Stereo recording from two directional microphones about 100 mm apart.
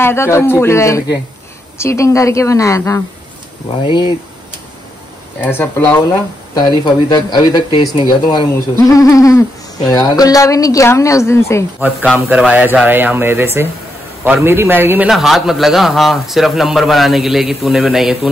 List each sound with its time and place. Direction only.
0.0 s a woman's voice: 25° left (ahead or behind)
3.8 s speech: 50° left (ahead or behind)
5.4 s speech: 20° left (ahead or behind)
6.5 s speech: 45° left (ahead or behind)
8.7 s a woman's voice: 35° left (ahead or behind)
12.3 s speech: 10° right (ahead or behind)
15.0 s a man's voice: centre (ahead or behind)